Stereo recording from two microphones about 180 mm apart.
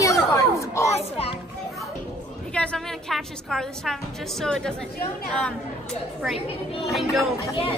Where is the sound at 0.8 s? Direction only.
35° left (ahead or behind).